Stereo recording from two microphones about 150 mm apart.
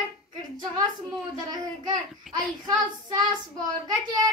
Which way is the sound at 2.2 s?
Centre (ahead or behind).